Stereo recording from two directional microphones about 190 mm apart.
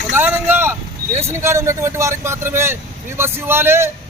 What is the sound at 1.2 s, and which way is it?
A man's voice, 15° right (ahead or behind).